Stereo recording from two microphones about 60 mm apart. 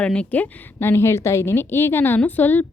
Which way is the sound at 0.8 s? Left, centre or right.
Left.